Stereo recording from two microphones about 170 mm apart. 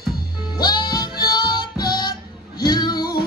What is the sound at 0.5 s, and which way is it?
Music, 25° left (ahead or behind).